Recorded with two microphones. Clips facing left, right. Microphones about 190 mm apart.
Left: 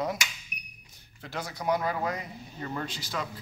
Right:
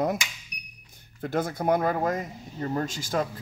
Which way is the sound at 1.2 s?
50° right (ahead or behind).